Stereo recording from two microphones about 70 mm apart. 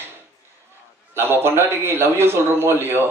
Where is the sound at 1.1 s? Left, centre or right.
Right.